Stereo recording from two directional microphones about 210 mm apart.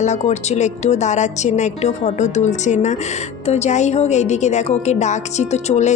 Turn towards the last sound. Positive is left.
turn(degrees=35)  # may be behind; listen again after turning